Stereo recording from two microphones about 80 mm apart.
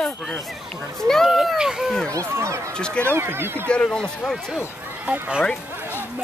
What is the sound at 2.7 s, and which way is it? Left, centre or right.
Speech, centre.